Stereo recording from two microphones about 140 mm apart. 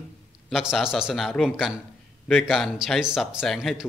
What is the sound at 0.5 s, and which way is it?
A man's voice, 5° right (ahead or behind).